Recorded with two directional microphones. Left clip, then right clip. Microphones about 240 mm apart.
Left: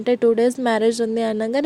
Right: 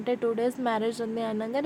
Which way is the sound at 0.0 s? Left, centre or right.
Left.